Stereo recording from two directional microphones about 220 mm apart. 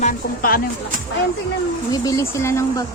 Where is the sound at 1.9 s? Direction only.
15° left (ahead or behind).